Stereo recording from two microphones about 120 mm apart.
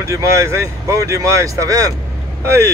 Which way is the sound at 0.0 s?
25° right (ahead or behind).